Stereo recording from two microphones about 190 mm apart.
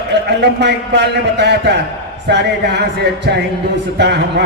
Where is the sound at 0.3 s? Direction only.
65° right (ahead or behind).